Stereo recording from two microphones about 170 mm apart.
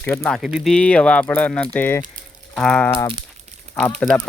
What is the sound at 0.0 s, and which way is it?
Speech, 10° left (ahead or behind).